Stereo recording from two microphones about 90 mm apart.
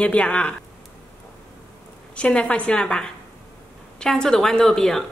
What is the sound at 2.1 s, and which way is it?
A woman's voice, 15° left (ahead or behind).